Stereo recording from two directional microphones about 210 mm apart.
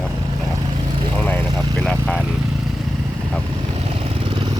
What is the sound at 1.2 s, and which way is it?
Speech, 10° left (ahead or behind).